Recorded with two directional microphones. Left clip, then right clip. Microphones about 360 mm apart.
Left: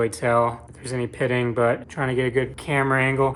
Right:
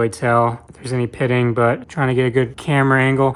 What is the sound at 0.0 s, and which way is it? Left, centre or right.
Speech, right.